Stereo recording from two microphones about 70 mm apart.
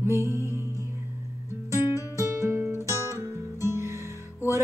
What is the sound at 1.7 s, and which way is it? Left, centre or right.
Music, right.